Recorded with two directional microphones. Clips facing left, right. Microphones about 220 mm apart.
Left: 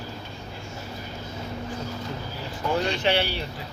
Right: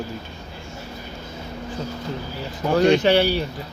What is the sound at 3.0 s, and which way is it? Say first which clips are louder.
Speech: right 7 dB; 40° right (ahead or behind).